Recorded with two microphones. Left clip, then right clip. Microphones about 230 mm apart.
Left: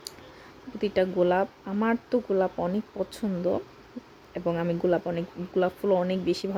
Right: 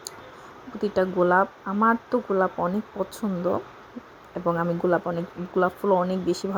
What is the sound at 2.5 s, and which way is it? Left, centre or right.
Speech, centre.